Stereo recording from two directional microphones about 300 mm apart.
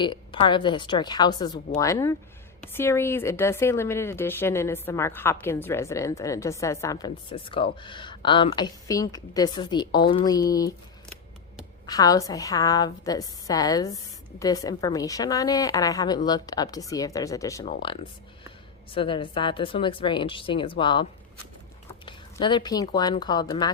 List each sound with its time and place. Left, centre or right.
0.0 s a woman's voice: centre
11.9 s a woman's voice: centre